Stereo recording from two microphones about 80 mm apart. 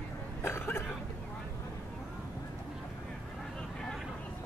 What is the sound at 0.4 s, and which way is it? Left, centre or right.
Cough, left.